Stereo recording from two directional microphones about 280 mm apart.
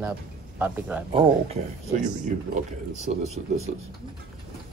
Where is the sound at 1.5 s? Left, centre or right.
Right.